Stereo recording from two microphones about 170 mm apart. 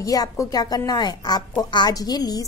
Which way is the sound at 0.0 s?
20° left (ahead or behind).